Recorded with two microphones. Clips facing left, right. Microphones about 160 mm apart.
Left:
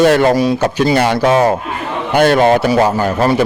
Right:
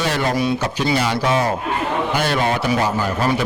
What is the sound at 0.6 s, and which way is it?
A man's voice, 50° left (ahead or behind).